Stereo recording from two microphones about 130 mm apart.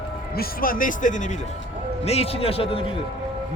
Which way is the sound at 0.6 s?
90° left.